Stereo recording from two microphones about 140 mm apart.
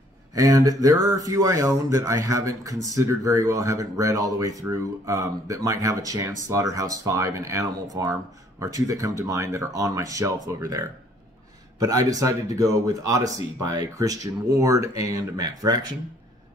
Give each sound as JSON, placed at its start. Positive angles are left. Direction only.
{"t": 0.3, "sound": "speech", "side_deg": -25}